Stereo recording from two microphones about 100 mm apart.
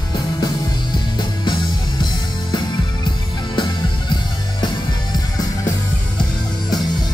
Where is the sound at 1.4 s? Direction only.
50° left (ahead or behind).